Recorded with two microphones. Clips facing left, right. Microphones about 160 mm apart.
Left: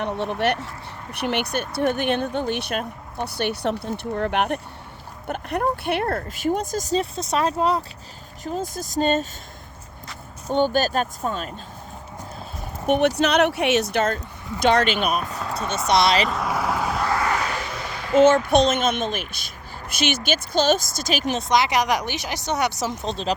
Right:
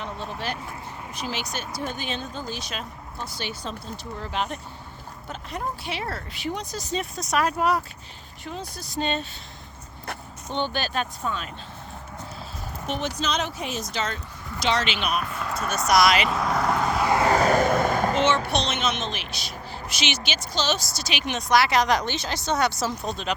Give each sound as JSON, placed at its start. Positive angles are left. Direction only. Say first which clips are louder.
{"t": 0.0, "sound": "speech", "louder": "left 9 dB", "side_deg": 65}
{"t": 8.4, "sound": "speech", "louder": "left 7 dB", "side_deg": 45}
{"t": 10.5, "sound": "speech", "louder": "left 7 dB", "side_deg": 45}
{"t": 12.9, "sound": "speech", "louder": "left 9 dB", "side_deg": 65}
{"t": 16.2, "sound": "vehicle", "louder": "even", "side_deg": 0}
{"t": 17.1, "sound": "vehicle", "louder": "right 4 dB", "side_deg": -25}
{"t": 17.3, "sound": "a sound", "louder": "right 8 dB", "side_deg": -45}
{"t": 18.4, "sound": "speech", "louder": "left 7 dB", "side_deg": 50}
{"t": 21.3, "sound": "a woman's voice", "louder": "right 1 dB", "side_deg": 20}